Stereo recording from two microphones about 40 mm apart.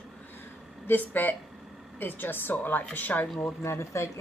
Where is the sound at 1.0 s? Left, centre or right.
Left.